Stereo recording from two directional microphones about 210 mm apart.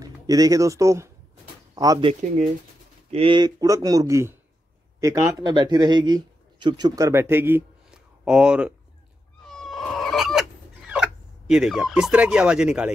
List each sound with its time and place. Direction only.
0.0 s speech: 15° right (ahead or behind)
9.4 s cat: centre (ahead or behind)
10.9 s speech: 5° right (ahead or behind)